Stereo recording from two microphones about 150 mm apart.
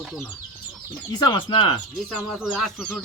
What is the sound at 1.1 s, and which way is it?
Speech, 25° left (ahead or behind).